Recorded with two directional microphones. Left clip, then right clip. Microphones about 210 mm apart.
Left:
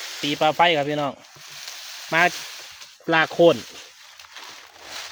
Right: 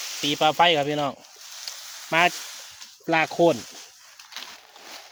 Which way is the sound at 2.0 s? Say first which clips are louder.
Left 1 dB; 5° right (ahead or behind).